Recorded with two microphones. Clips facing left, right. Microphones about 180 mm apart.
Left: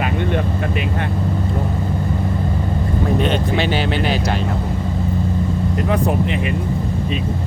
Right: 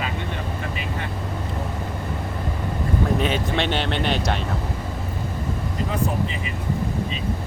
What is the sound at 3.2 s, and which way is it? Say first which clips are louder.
Speech: left 4 dB; centre (ahead or behind).